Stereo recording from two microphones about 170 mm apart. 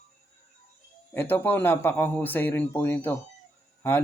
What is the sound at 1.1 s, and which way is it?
A man's voice, 10° left (ahead or behind).